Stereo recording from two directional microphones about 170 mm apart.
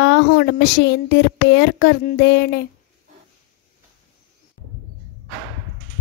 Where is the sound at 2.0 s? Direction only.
70° left (ahead or behind).